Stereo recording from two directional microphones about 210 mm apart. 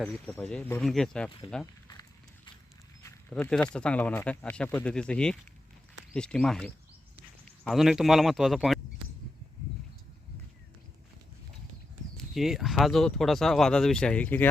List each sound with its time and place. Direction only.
0.1 s speech: 10° left (ahead or behind)
1.9 s run: 20° left (ahead or behind)
3.0 s speech: 10° left (ahead or behind)
12.1 s speech: centre (ahead or behind)